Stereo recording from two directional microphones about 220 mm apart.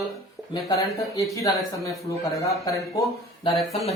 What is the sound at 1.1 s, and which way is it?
A man's voice, 15° left (ahead or behind).